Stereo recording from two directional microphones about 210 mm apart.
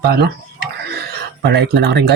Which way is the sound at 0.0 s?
50° right (ahead or behind).